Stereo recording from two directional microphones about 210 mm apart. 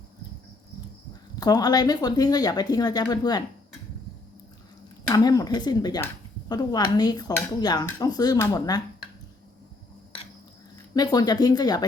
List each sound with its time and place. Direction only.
1.4 s speech: 20° left (ahead or behind)
5.0 s speech: 15° left (ahead or behind)
10.9 s speech: 20° left (ahead or behind)